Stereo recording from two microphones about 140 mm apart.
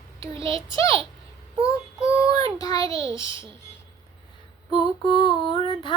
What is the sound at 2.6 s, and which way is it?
Child singing, 25° left (ahead or behind).